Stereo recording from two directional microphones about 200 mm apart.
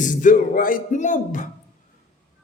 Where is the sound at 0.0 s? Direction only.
40° left (ahead or behind).